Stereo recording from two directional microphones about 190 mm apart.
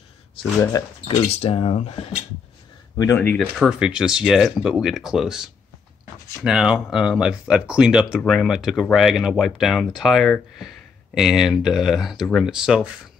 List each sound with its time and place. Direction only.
1.0 s speech: 30° left (ahead or behind)
3.0 s speech: 15° left (ahead or behind)
3.5 s speech: 5° right (ahead or behind)